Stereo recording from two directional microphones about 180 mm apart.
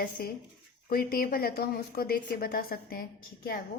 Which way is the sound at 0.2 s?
55° left (ahead or behind).